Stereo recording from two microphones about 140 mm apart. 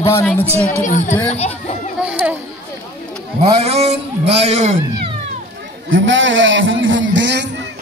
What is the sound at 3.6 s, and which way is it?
Speech, 50° right (ahead or behind).